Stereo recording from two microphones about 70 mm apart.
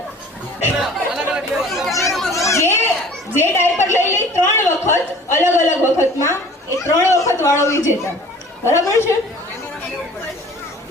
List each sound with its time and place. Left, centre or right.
0.8 s chatter: centre
2.0 s children playing: centre
2.5 s children playing: left
3.3 s a sound: left
5.5 s a woman's voice: left